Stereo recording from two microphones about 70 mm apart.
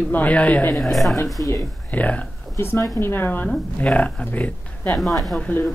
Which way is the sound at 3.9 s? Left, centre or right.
Centre.